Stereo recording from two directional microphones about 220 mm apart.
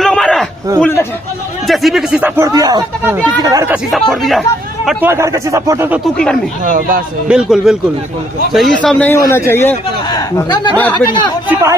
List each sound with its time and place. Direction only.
0.0 s a sound: 5° left (ahead or behind)
0.7 s a man's voice: 10° left (ahead or behind); by 3.7 s 15° right (ahead or behind)
4.1 s speech: centre (ahead or behind)
5.1 s speech: 15° right (ahead or behind)
6.6 s speech: 35° right (ahead or behind)
7.2 s a man's voice: 5° right (ahead or behind); by 10.7 s 15° left (ahead or behind)
11.4 s speech: 10° right (ahead or behind)